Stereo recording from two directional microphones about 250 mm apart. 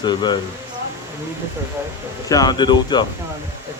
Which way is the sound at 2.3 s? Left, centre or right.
Centre.